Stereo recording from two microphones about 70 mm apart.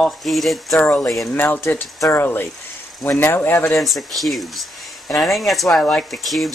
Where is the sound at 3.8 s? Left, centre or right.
Centre.